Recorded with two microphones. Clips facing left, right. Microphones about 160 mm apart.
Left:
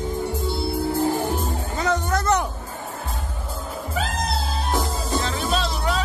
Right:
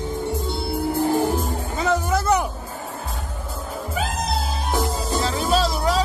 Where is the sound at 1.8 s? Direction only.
5° right (ahead or behind).